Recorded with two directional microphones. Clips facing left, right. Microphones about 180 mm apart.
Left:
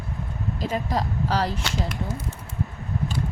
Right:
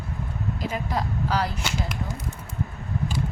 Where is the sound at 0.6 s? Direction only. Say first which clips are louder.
Left 3 dB; 35° left (ahead or behind).